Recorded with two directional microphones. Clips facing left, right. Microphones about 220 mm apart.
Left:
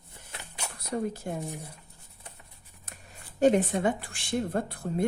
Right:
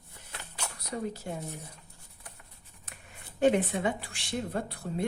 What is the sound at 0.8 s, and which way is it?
Speech, 50° left (ahead or behind).